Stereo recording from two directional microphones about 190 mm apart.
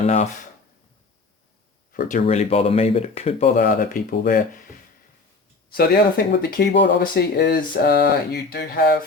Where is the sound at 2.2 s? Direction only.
30° left (ahead or behind).